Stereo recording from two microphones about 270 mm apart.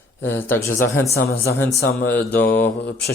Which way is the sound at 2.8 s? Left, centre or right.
Left.